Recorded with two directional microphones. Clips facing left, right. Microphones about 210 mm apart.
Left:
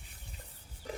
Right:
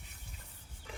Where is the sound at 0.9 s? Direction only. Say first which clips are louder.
Left 8 dB; 40° left (ahead or behind).